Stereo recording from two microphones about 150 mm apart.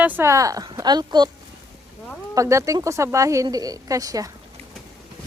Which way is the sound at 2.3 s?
20° right (ahead or behind).